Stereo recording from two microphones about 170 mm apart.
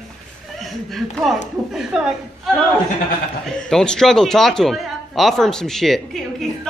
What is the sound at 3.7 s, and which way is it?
A man's voice, 5° left (ahead or behind).